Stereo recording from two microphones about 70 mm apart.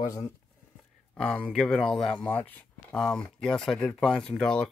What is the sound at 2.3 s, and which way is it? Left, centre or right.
Speech, left.